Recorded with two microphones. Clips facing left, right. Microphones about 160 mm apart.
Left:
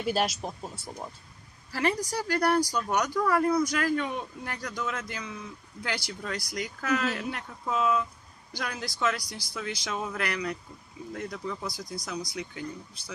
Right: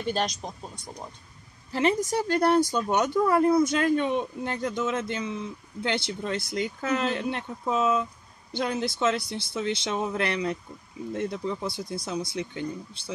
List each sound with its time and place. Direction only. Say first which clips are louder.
0.0 s speech: even; 5° left (ahead or behind)
1.7 s speech: right 4 dB; 20° right (ahead or behind)